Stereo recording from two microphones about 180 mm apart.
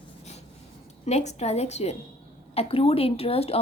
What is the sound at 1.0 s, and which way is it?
A woman's voice, 40° left (ahead or behind).